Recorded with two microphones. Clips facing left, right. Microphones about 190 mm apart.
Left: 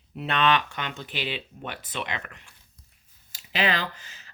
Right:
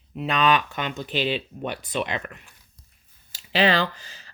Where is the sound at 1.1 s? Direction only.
15° left (ahead or behind).